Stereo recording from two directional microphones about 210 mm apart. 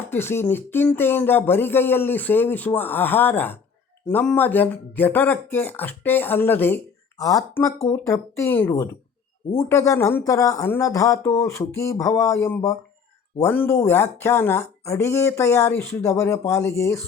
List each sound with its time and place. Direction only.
0.1 s speech: 10° left (ahead or behind)